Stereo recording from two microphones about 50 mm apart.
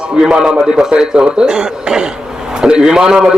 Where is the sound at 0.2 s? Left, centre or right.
Centre.